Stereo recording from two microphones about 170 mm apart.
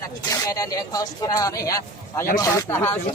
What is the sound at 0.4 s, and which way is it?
Speech, 20° left (ahead or behind).